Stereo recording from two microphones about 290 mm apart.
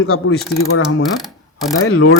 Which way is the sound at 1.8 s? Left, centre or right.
Left.